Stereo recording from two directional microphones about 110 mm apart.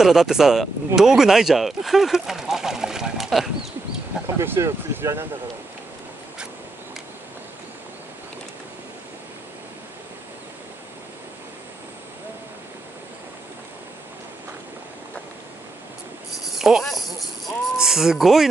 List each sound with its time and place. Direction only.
0.0 s speech: 5° right (ahead or behind)
4.4 s speech: 25° right (ahead or behind)
16.4 s speech: 5° right (ahead or behind)